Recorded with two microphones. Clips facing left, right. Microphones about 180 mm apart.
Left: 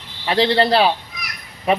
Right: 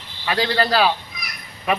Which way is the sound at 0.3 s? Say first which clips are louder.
Left 4 dB; 25° left (ahead or behind).